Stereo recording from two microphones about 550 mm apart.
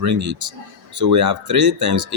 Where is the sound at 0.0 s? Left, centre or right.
Right.